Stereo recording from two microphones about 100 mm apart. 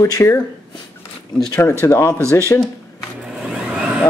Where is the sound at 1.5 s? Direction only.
25° left (ahead or behind).